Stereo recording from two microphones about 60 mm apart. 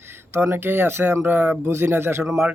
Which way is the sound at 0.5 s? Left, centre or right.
Right.